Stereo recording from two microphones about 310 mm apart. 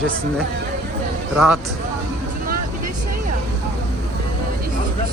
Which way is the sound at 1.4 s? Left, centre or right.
Centre.